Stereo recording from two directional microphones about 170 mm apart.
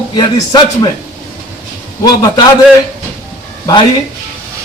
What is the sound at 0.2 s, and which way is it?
Music, 25° left (ahead or behind).